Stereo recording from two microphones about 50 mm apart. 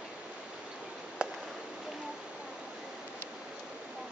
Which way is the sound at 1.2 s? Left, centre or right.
Centre.